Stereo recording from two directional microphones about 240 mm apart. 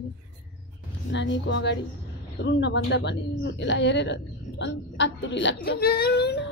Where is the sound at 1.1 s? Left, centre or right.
Left.